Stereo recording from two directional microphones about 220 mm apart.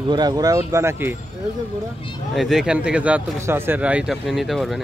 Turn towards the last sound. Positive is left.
turn(degrees=0)  # may be behind; listen again after turning